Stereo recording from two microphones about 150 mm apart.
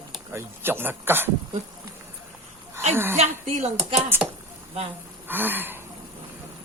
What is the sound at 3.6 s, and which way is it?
Speech, 45° right (ahead or behind).